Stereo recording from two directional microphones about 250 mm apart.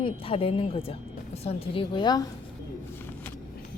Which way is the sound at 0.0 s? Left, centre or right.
Left.